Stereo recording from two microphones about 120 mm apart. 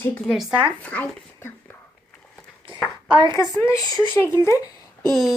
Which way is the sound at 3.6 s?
25° left (ahead or behind).